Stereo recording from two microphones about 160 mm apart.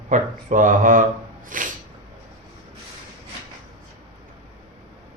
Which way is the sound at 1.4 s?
55° right (ahead or behind).